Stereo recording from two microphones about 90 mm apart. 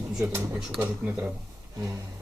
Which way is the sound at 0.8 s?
25° right (ahead or behind).